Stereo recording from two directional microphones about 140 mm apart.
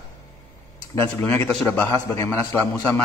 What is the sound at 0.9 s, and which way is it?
Speech, 15° left (ahead or behind).